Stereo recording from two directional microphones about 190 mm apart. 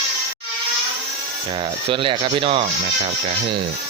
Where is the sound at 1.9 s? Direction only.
25° right (ahead or behind).